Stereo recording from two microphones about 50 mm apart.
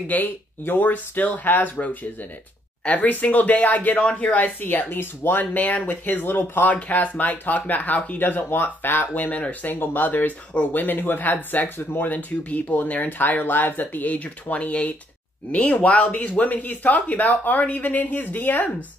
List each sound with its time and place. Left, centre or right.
0.1 s speech: left
6.6 s speech: left
8.2 s speech: left
9.1 s speech: left